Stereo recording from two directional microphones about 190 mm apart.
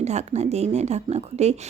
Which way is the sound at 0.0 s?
35° right (ahead or behind).